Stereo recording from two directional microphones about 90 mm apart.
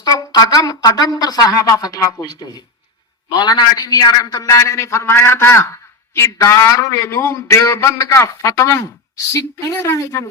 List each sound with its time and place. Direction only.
0.0 s speech: 45° left (ahead or behind)
3.2 s a man's voice: 50° left (ahead or behind); by 10.2 s 35° left (ahead or behind)